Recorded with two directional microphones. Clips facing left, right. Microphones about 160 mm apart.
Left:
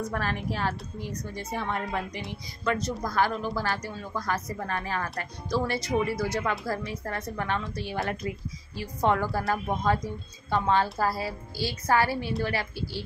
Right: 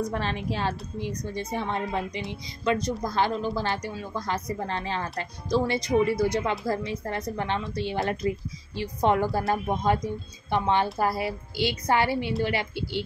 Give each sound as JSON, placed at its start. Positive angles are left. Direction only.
{"t": 0.1, "sound": "speech", "side_deg": -20}